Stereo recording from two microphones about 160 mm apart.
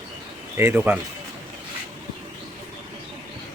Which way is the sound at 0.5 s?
15° right (ahead or behind).